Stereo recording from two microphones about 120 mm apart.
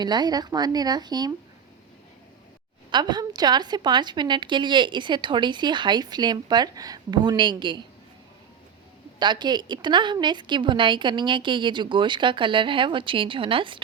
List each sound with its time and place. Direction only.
0.0 s a woman's voice: 35° right (ahead or behind)
2.9 s a woman's voice: 35° right (ahead or behind)
9.1 s a woman's voice: 40° right (ahead or behind)